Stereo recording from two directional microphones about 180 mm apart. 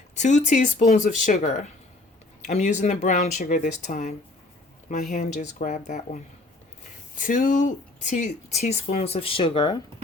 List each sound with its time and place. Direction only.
0.2 s speech: 40° left (ahead or behind)
7.2 s speech: 45° left (ahead or behind); by 9.8 s 25° left (ahead or behind)